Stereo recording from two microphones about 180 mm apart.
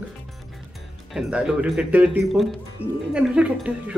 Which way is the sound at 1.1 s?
5° right (ahead or behind).